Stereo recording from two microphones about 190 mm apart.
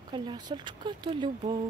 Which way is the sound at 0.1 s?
25° right (ahead or behind).